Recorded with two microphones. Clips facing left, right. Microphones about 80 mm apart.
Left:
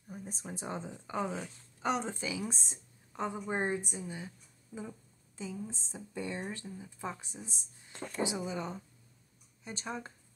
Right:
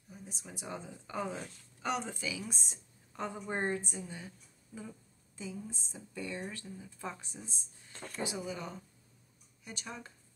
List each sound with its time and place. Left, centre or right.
0.1 s a woman's voice: left; by 4.0 s centre
5.4 s speech: left